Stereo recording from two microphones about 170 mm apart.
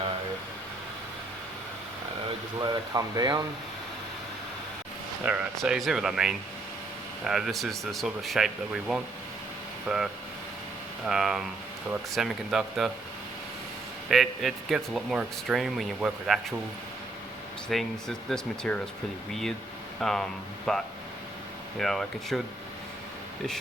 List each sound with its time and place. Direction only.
2.6 s speech: 25° right (ahead or behind)
5.2 s speech: 5° right (ahead or behind)
14.1 s speech: centre (ahead or behind)
17.7 s speech: centre (ahead or behind)